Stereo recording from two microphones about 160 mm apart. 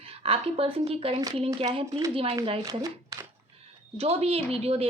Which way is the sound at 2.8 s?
20° right (ahead or behind).